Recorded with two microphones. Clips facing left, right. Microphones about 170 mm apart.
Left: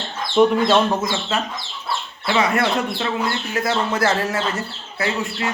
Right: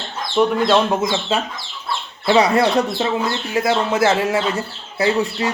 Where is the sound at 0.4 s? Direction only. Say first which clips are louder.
Left 2 dB; 10° left (ahead or behind).